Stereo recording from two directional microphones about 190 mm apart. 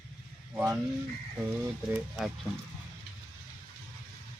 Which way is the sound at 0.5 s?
10° right (ahead or behind).